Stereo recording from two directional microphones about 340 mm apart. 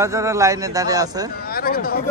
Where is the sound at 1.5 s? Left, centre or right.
Left.